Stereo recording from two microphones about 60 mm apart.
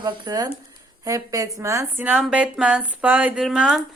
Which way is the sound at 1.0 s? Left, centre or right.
Right.